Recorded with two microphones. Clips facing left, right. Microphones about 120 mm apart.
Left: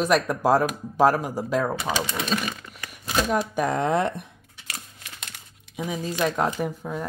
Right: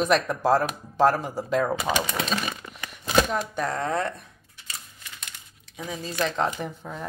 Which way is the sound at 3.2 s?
10° left (ahead or behind).